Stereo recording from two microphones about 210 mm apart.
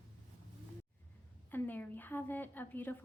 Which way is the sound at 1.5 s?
10° left (ahead or behind).